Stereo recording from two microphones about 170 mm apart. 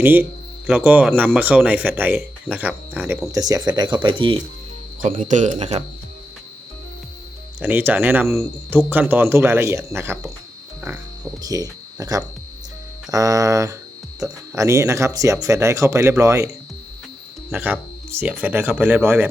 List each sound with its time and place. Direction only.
0.0 s speech: 10° right (ahead or behind)
3.2 s speech: 20° right (ahead or behind)
5.0 s speech: 50° right (ahead or behind)
7.6 s speech: 10° right (ahead or behind)
11.4 s speech: 20° right (ahead or behind)
17.5 s speech: 10° right (ahead or behind)